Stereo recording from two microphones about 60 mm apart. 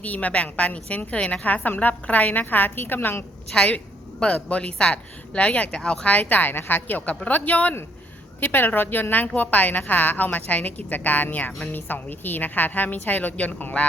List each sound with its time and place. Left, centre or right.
0.0 s a woman's voice: left
3.5 s a woman's voice: centre